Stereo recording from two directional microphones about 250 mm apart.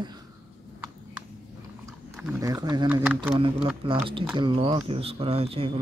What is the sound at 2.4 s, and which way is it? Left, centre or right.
Speech, centre.